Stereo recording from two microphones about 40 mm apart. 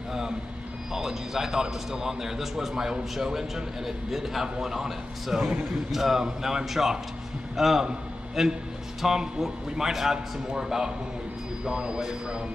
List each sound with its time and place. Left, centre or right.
0.9 s a man's voice: centre